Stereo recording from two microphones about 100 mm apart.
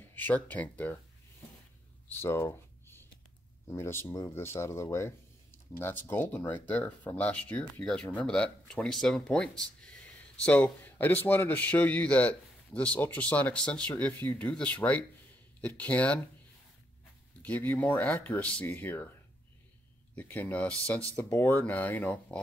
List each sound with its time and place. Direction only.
0.0 s speech: 20° left (ahead or behind)
2.2 s a sound: 25° left (ahead or behind)
3.6 s speech: 25° left (ahead or behind)
17.4 s speech: 20° left (ahead or behind)
20.2 s speech: 20° left (ahead or behind)